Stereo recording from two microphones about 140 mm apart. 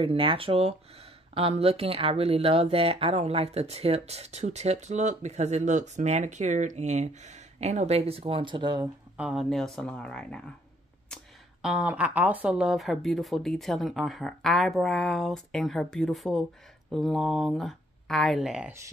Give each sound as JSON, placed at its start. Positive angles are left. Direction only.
{"t": 0.0, "sound": "speech", "side_deg": -40}
{"t": 9.1, "sound": "speech", "side_deg": -5}
{"t": 11.6, "sound": "speech", "side_deg": -10}